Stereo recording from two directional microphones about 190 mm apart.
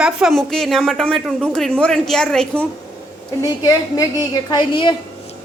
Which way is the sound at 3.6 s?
20° left (ahead or behind).